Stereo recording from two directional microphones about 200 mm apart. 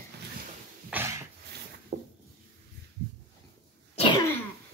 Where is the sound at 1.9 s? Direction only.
50° right (ahead or behind).